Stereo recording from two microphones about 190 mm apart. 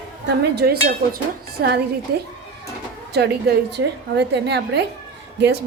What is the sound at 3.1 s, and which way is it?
A woman's voice, 60° right (ahead or behind).